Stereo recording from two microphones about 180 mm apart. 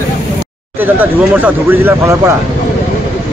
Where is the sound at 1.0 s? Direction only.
10° right (ahead or behind).